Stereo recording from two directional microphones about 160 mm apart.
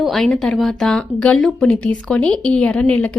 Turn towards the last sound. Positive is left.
turn(degrees=5)  # may be behind; listen again after turning